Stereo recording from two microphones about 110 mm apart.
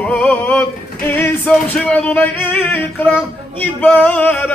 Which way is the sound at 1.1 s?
20° left (ahead or behind).